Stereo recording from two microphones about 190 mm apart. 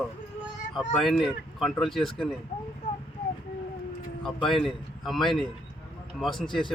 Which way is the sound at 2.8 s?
40° left (ahead or behind).